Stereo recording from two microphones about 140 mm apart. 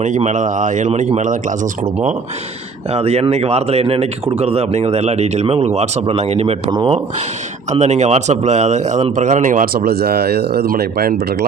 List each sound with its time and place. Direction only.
0.0 s speech: 60° right (ahead or behind)
2.9 s speech: 50° right (ahead or behind)
6.7 s speech: 30° right (ahead or behind)
7.7 s speech: 55° right (ahead or behind); by 11.2 s 90° right